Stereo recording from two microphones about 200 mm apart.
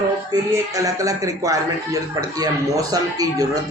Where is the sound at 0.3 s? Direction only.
15° right (ahead or behind).